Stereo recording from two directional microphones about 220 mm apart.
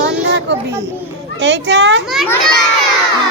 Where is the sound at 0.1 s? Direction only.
50° right (ahead or behind).